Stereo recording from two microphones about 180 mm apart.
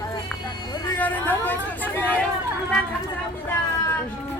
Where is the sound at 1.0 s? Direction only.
10° left (ahead or behind).